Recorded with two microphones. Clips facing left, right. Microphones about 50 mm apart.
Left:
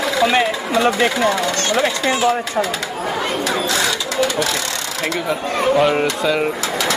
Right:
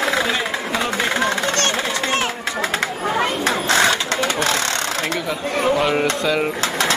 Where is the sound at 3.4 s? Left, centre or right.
Right.